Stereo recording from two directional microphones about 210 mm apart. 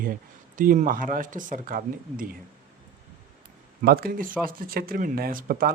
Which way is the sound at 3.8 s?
45° right (ahead or behind).